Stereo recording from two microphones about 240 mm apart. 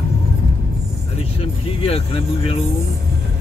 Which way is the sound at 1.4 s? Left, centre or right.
Left.